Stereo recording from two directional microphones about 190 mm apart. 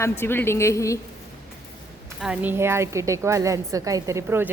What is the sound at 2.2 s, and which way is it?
A woman's voice, 5° right (ahead or behind).